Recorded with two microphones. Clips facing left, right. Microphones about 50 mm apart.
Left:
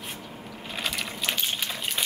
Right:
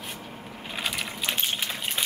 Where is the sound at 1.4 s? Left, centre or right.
Right.